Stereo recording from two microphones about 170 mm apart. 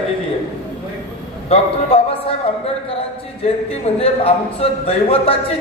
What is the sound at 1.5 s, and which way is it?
Speech, 35° left (ahead or behind).